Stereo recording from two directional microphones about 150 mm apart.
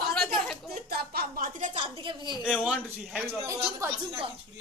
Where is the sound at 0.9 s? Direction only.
90° right; by 1.7 s 65° right (ahead or behind).